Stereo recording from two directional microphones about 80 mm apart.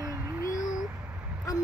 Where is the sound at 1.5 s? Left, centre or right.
Left.